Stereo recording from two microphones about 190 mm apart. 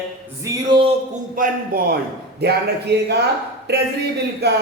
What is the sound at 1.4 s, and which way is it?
A man's voice, 50° right (ahead or behind).